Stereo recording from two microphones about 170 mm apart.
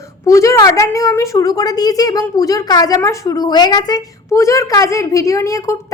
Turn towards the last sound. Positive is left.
turn(degrees=20)  # may be behind; listen again after turning